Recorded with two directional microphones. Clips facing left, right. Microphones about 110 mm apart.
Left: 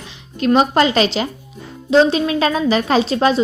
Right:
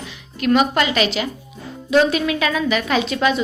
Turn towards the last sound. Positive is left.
turn(degrees=35)  # may be behind; listen again after turning